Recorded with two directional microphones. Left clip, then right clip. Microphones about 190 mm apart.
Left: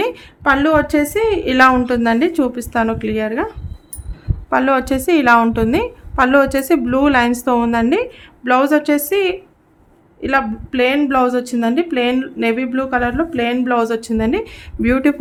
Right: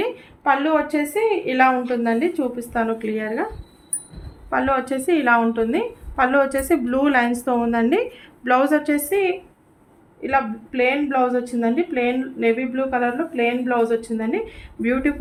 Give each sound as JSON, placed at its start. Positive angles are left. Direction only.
{"t": 0.0, "sound": "a woman's voice", "side_deg": 50}
{"t": 4.4, "sound": "a woman's voice", "side_deg": 40}
{"t": 10.2, "sound": "a woman's voice", "side_deg": 45}